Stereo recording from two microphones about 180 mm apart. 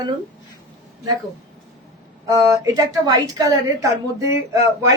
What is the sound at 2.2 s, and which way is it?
A woman's voice, 15° right (ahead or behind).